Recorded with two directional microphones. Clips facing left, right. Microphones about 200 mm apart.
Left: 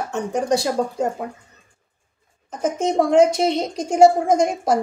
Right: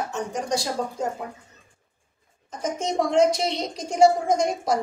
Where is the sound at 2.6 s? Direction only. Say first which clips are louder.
Left 6 dB; 55° left (ahead or behind).